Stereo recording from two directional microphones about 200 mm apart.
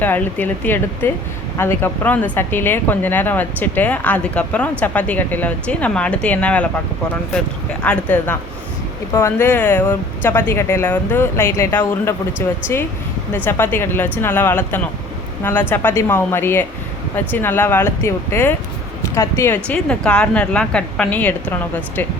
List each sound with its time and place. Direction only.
0.0 s speech: 10° left (ahead or behind)